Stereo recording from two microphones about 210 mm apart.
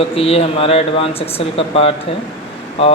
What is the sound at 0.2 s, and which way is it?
Speech, 30° left (ahead or behind).